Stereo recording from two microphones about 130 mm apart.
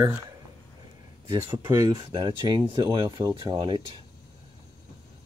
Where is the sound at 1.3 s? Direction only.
40° right (ahead or behind).